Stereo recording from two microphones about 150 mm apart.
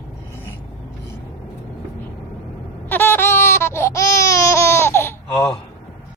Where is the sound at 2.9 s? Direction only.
15° left (ahead or behind).